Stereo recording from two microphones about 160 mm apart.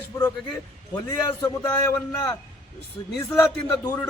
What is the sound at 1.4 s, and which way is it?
Speech, 20° left (ahead or behind).